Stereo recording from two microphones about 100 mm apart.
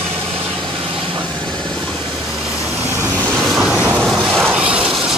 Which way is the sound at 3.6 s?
10° right (ahead or behind).